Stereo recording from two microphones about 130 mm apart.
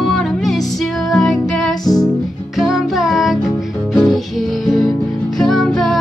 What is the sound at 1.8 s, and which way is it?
Music, 30° left (ahead or behind).